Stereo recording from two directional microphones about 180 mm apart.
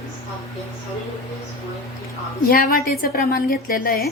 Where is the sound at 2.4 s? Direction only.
55° left (ahead or behind).